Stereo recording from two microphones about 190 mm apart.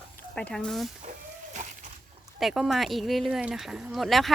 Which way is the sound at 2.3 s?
Centre (ahead or behind).